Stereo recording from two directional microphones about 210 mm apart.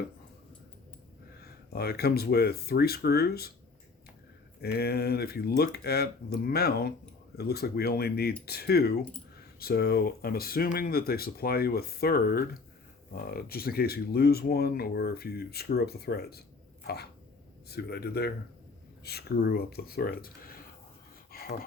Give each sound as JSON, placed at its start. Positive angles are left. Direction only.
{"t": 1.4, "sound": "speech", "side_deg": 50}
{"t": 4.6, "sound": "speech", "side_deg": 50}
{"t": 16.8, "sound": "a sound", "side_deg": 50}
{"t": 17.7, "sound": "speech", "side_deg": 50}